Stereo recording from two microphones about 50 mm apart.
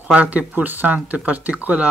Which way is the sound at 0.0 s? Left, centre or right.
Right.